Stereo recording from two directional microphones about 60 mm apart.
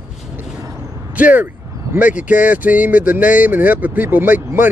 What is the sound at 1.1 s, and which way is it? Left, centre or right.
Speech, right.